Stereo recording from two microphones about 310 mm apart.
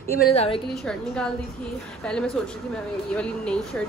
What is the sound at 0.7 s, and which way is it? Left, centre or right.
A woman's voice, centre.